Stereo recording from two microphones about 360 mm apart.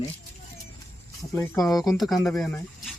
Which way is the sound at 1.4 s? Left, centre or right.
Centre.